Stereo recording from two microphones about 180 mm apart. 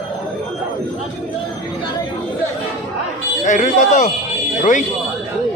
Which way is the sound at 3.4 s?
45° left (ahead or behind).